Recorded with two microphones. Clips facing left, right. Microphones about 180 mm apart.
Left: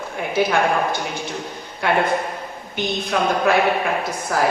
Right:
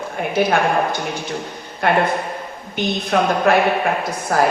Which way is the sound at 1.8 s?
55° right (ahead or behind).